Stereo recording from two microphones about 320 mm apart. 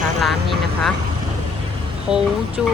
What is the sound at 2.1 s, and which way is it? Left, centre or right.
Speech, centre.